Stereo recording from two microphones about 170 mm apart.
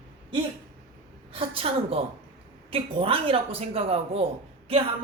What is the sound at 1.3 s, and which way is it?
Speech, 35° right (ahead or behind).